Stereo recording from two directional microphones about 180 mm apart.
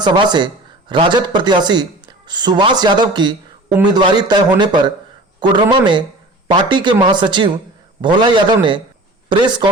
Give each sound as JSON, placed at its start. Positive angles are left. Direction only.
{"t": 0.0, "sound": "speech", "side_deg": -25}